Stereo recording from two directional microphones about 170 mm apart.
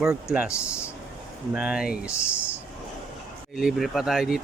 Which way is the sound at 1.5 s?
5° right (ahead or behind).